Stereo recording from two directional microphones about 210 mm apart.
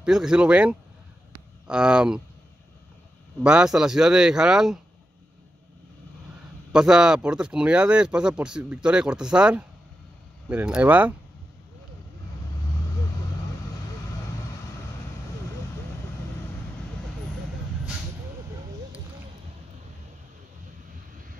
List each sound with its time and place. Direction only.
0.0 s speech: 5° right (ahead or behind)
3.4 s speech: 5° right (ahead or behind)
6.7 s speech: 5° right (ahead or behind)